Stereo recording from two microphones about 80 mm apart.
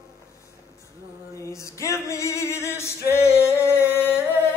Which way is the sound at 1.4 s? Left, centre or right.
Left.